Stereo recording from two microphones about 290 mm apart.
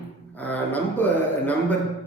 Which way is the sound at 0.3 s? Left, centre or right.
Centre.